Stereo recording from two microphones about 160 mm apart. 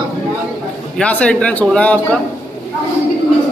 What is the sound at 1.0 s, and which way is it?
Speech, 5° left (ahead or behind).